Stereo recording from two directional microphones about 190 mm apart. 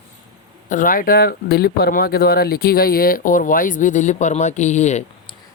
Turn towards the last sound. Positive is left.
turn(degrees=35)  # may be behind; listen again after turning